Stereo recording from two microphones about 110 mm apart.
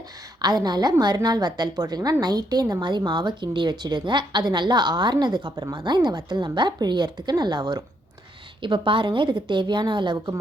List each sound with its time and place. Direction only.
0.4 s a woman's voice: 40° right (ahead or behind)